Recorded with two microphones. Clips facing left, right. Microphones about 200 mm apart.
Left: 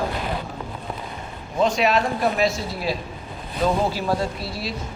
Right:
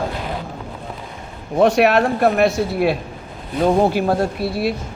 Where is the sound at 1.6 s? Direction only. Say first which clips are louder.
Right 6 dB; 65° right (ahead or behind).